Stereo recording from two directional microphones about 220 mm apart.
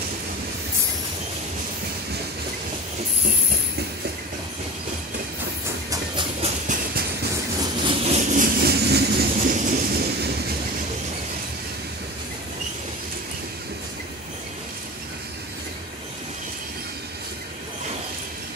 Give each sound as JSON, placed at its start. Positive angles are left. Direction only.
{"t": 5.9, "sound": "train", "side_deg": -20}
{"t": 7.6, "sound": "vehicle", "side_deg": -25}